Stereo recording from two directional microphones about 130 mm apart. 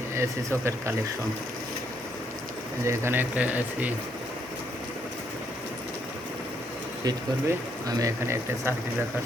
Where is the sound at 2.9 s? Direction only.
15° right (ahead or behind).